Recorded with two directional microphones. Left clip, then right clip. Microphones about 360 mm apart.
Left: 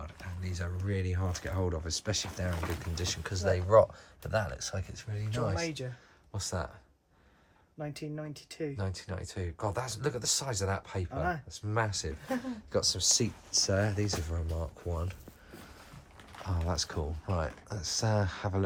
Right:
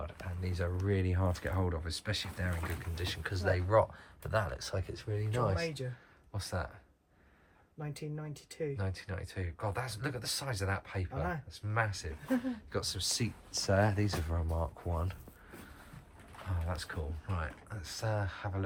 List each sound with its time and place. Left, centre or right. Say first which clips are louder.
0.0 s speech: right 2 dB; centre
7.8 s speech: left 4 dB; centre
16.5 s speech: left 6 dB; centre